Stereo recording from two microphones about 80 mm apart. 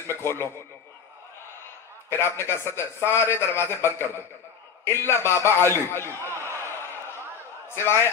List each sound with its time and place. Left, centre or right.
0.1 s a man's voice: left
2.0 s a man's voice: left
4.9 s a sound: left
7.7 s a man's voice: left